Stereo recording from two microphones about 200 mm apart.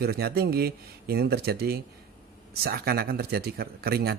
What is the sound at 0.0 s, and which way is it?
Speech, 50° right (ahead or behind).